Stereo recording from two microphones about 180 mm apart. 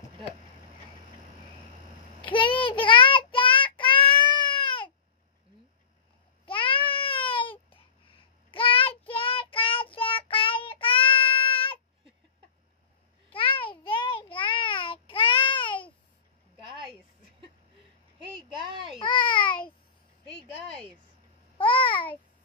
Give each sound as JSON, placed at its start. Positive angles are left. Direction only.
{"t": 2.2, "sound": "child singing", "side_deg": 30}
{"t": 6.4, "sound": "babbling", "side_deg": 30}
{"t": 7.7, "sound": "child singing", "side_deg": 30}
{"t": 13.3, "sound": "child singing", "side_deg": 30}
{"t": 18.9, "sound": "babbling", "side_deg": 30}
{"t": 21.5, "sound": "babbling", "side_deg": 30}